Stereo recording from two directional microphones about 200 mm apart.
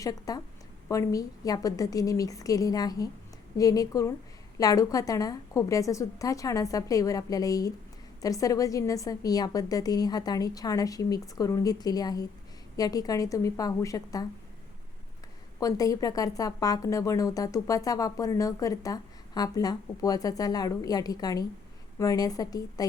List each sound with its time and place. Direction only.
0.0 s a woman's voice: 15° left (ahead or behind)
15.6 s a woman's voice: 15° left (ahead or behind)